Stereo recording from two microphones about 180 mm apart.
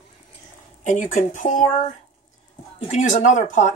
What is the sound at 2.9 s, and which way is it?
Speech, 45° left (ahead or behind).